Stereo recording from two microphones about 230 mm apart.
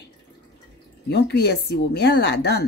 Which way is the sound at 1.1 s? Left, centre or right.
Left.